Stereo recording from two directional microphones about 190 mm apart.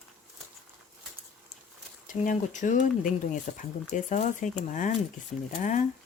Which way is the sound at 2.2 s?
40° left (ahead or behind).